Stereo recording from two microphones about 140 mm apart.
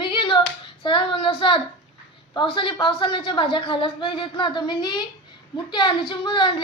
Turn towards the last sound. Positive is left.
turn(degrees=35)  # may be behind; listen again after turning